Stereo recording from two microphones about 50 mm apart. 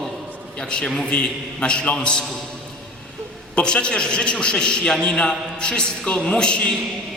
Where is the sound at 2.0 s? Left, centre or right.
Centre.